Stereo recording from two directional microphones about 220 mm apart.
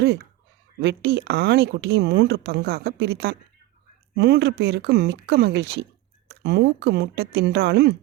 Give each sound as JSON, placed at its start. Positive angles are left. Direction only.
{"t": 0.8, "sound": "speech", "side_deg": -50}